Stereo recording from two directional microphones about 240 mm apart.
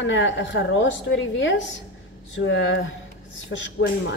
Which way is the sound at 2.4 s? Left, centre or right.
Left.